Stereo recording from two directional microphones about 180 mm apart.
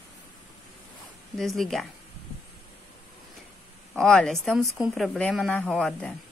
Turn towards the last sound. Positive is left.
turn(degrees=5)  # may be behind; listen again after turning